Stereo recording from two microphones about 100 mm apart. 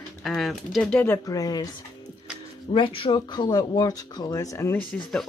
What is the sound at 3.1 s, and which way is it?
Speech, 45° left (ahead or behind).